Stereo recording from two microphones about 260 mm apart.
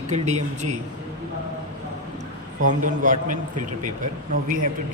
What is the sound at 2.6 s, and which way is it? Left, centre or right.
A man's voice, right.